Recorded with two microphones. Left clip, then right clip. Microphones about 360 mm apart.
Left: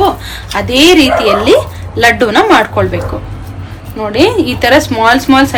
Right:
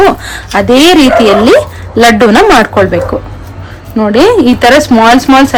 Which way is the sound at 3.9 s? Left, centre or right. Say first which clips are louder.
Right 5 dB; right.